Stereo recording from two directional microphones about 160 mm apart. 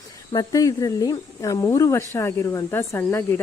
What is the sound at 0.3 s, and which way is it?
Speech, 20° left (ahead or behind).